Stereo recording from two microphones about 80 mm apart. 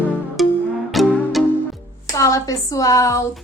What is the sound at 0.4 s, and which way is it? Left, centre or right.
Music, centre.